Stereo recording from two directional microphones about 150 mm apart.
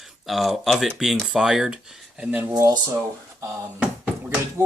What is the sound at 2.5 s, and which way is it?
Speech, 25° right (ahead or behind).